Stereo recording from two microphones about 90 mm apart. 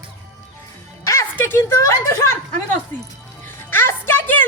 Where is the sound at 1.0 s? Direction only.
35° left (ahead or behind).